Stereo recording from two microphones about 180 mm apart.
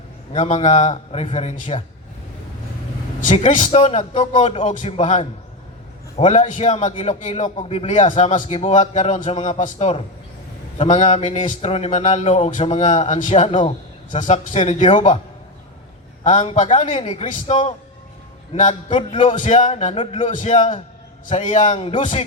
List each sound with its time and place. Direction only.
0.3 s a man's voice: 40° left (ahead or behind)
3.2 s a man's voice: 40° left (ahead or behind)
16.2 s a man's voice: 40° left (ahead or behind)